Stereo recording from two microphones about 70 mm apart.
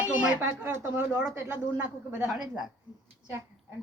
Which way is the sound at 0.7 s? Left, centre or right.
Right.